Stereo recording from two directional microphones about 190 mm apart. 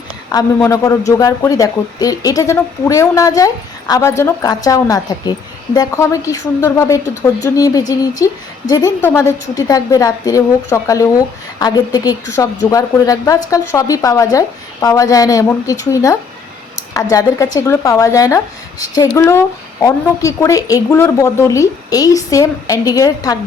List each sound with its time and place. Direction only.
0.3 s a woman's voice: 20° left (ahead or behind)